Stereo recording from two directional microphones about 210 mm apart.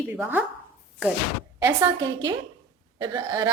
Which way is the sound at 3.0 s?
15° right (ahead or behind).